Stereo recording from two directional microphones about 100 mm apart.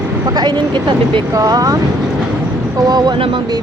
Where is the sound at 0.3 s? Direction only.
50° right (ahead or behind).